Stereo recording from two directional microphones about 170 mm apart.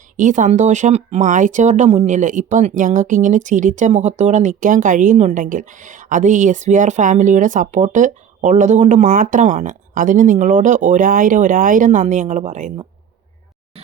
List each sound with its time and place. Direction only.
0.2 s speech: 50° right (ahead or behind)